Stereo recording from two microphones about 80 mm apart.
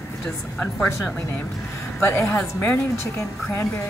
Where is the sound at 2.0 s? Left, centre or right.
Left.